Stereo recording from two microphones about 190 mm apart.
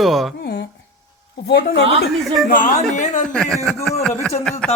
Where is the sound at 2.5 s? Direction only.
40° left (ahead or behind).